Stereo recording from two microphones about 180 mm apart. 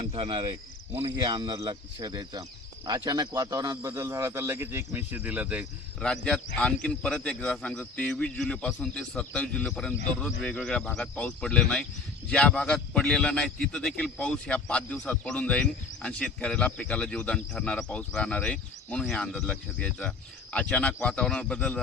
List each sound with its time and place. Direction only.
0.0 s cricket: 30° right (ahead or behind)
1.1 s speech: 25° right (ahead or behind); by 5.6 s 10° right (ahead or behind)
6.0 s a man's voice: 5° left (ahead or behind)